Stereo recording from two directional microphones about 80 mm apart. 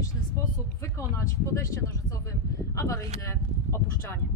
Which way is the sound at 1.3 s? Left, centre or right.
Left.